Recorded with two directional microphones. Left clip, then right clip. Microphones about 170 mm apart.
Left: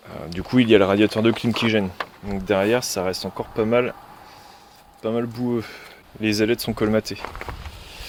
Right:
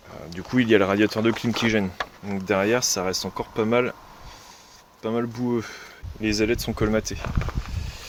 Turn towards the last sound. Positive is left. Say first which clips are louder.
# left 2 dB
turn(degrees=15)  # may be behind; listen again after turning